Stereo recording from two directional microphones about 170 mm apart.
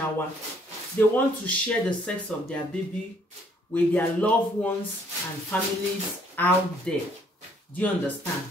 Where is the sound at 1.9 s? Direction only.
5° left (ahead or behind).